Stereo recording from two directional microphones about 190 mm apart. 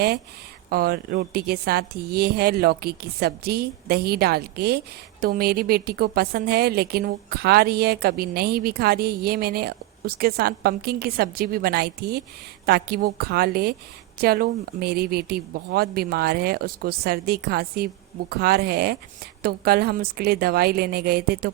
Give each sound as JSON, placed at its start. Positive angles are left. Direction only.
{"t": 0.7, "sound": "a woman's voice", "side_deg": -50}